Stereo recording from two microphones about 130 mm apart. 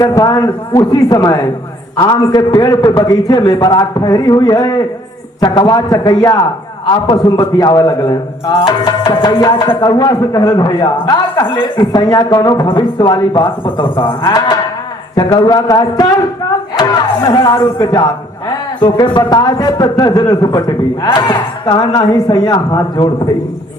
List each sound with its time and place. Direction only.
0.0 s a man's voice: 30° left (ahead or behind)
9.4 s a man's voice: 25° left (ahead or behind)
17.2 s a man's voice: 25° left (ahead or behind)